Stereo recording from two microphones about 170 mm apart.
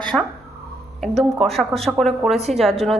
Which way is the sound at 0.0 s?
5° left (ahead or behind).